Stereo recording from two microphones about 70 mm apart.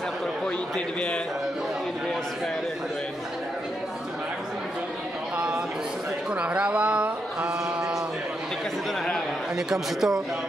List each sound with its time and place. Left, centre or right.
0.7 s a man's voice: centre
6.3 s a sound: centre
9.6 s a man's voice: centre